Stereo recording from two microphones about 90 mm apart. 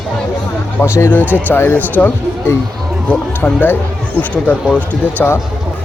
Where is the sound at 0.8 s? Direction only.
30° left (ahead or behind); by 5.3 s 15° left (ahead or behind).